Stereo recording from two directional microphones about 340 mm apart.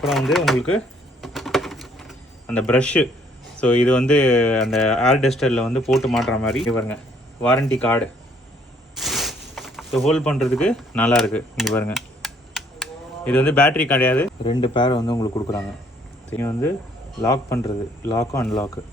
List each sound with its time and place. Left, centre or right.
0.0 s speech: centre
1.2 s a sound: centre
3.6 s speech: centre